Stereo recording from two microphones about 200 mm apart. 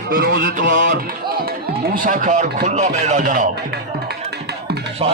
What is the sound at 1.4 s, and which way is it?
Speech, 45° right (ahead or behind).